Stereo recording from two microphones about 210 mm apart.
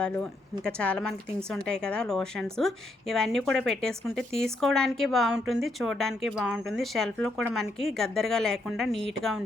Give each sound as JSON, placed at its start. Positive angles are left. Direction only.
{"t": 0.0, "sound": "a woman's voice", "side_deg": 5}